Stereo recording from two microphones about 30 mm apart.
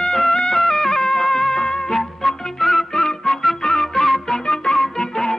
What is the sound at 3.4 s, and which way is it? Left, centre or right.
Flute, centre.